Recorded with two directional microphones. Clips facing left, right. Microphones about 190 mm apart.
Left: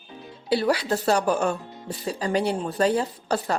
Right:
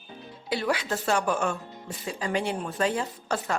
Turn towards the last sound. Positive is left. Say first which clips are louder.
# left 4 dB
turn(degrees=35)  # may be behind; listen again after turning